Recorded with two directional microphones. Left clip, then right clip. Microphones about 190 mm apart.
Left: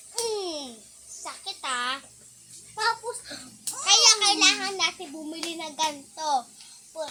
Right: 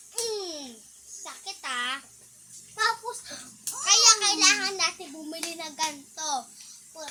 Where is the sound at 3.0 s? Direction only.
20° right (ahead or behind).